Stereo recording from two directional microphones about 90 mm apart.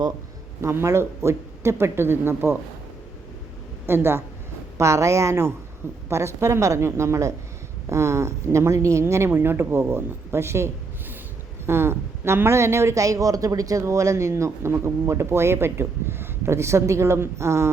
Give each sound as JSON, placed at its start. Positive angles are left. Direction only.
{"t": 0.6, "sound": "speech", "side_deg": -30}
{"t": 3.8, "sound": "speech", "side_deg": -25}